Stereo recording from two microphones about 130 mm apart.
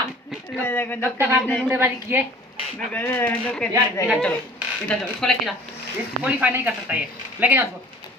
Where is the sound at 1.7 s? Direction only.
15° right (ahead or behind).